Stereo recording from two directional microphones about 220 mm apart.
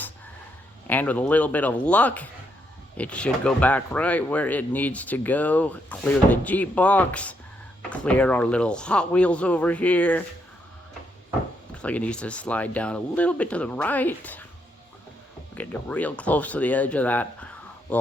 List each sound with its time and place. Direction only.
0.9 s speech: 5° left (ahead or behind)
11.7 s speech: 5° left (ahead or behind)
15.5 s speech: 5° left (ahead or behind)